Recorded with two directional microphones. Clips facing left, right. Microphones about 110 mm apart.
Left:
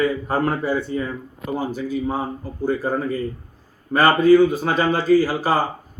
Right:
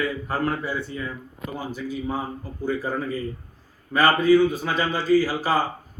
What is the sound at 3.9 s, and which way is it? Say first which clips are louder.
Speech: left 4 dB; 50° left (ahead or behind).